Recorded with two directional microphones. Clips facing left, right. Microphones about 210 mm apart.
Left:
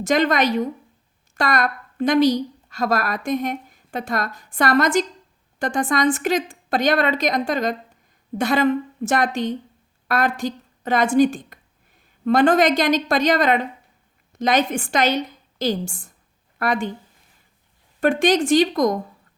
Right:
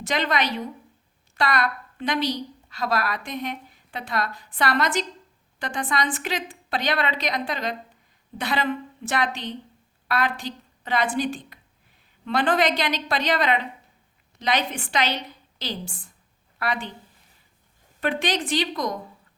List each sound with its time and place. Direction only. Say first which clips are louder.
0.0 s a woman's voice: left 7 dB; 45° left (ahead or behind)
18.0 s a woman's voice: left 8 dB; 45° left (ahead or behind)